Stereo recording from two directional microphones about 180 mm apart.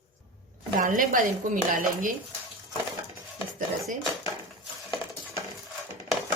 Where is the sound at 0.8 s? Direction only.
50° right (ahead or behind).